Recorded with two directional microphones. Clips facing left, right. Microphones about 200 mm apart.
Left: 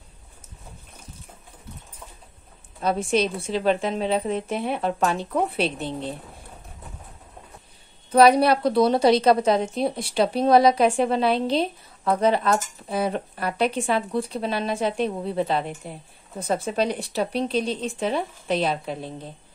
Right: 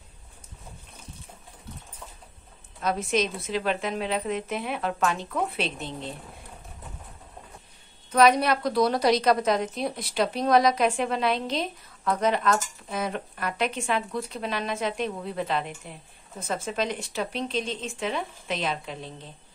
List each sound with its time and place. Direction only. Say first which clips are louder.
2.8 s speech: left 4 dB; 30° left (ahead or behind)
8.1 s speech: left 4 dB; 35° left (ahead or behind)